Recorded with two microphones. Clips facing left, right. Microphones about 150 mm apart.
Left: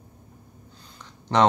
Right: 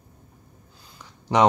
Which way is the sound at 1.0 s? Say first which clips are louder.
Right 1 dB; 10° right (ahead or behind).